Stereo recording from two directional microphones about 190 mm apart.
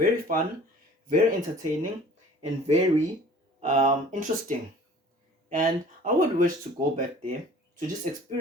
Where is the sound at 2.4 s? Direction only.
35° right (ahead or behind).